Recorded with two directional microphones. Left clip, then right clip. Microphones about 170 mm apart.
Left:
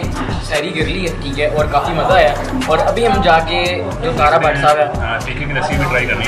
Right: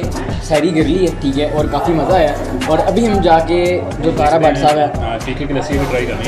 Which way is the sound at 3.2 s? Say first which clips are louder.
Right 3 dB; 35° right (ahead or behind).